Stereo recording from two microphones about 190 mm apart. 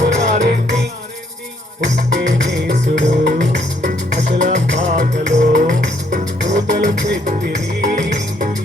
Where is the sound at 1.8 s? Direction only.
40° right (ahead or behind).